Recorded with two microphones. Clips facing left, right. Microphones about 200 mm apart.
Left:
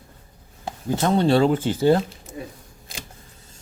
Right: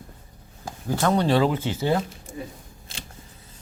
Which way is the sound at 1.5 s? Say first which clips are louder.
Left 6 dB; 50° left (ahead or behind).